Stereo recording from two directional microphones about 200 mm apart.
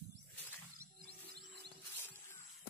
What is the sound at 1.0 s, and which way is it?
Music, 50° right (ahead or behind).